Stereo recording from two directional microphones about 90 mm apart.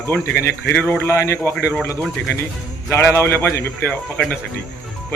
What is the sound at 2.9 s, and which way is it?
Speech, 30° left (ahead or behind).